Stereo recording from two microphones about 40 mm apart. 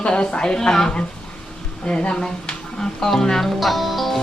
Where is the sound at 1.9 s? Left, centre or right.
Left.